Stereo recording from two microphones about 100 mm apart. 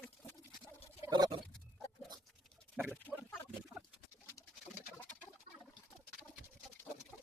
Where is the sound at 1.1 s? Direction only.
45° right (ahead or behind).